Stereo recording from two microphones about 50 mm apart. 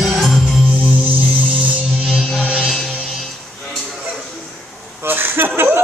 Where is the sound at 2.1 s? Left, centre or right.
Centre.